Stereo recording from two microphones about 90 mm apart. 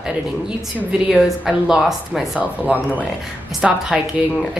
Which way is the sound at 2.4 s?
15° right (ahead or behind).